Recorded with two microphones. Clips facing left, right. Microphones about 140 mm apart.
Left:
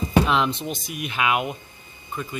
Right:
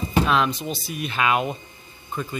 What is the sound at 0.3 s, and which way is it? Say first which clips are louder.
Speech: right 1 dB; 25° left (ahead or behind).